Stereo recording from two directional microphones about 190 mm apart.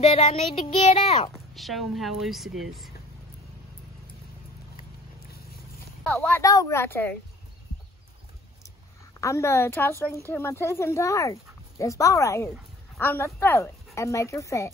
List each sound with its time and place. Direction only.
0.0 s child singing: 30° left (ahead or behind)
1.3 s speech: centre (ahead or behind)
6.1 s speech: 10° left (ahead or behind)
9.2 s speech: 15° left (ahead or behind)